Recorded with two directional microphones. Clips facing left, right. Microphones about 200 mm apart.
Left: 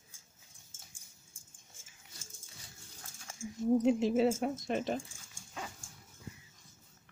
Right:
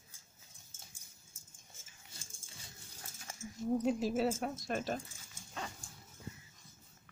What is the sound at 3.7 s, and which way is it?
Speech, 20° left (ahead or behind).